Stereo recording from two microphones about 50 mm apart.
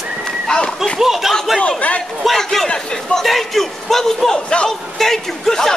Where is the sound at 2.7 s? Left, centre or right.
Centre.